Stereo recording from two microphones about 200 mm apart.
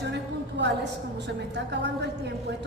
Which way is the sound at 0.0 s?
60° right (ahead or behind).